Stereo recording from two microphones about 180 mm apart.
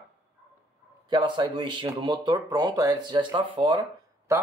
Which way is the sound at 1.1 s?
25° right (ahead or behind).